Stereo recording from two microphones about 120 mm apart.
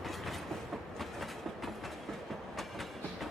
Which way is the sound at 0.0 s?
Centre (ahead or behind).